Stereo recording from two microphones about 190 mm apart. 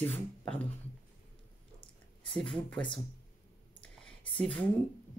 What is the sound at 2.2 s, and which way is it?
Speech, 5° left (ahead or behind).